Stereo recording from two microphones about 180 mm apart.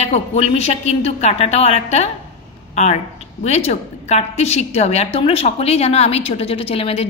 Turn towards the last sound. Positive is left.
turn(degrees=35)  # may be behind; listen again after turning